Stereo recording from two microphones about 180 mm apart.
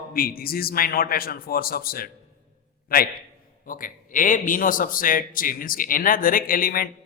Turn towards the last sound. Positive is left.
turn(degrees=55)  # may be behind; listen again after turning